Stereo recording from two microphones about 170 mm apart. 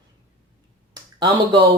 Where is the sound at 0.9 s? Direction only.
25° right (ahead or behind).